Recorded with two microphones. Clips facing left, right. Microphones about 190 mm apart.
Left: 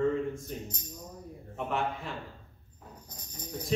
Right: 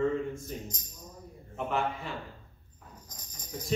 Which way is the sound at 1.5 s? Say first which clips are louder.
Right 1 dB; centre (ahead or behind).